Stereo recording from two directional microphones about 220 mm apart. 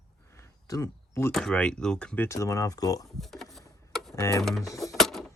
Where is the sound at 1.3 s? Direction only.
Centre (ahead or behind).